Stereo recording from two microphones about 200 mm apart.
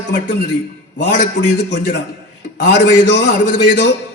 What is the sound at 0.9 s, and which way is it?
A man's voice, 55° left (ahead or behind).